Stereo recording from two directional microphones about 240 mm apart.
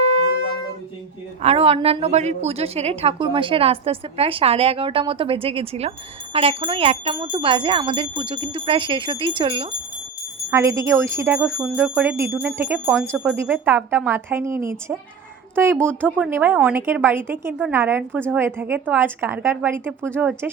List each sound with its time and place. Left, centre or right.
0.1 s wind instrument: left
1.4 s a woman's voice: right; by 20.5 s centre